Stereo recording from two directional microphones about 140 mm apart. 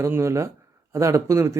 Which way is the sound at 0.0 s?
20° right (ahead or behind).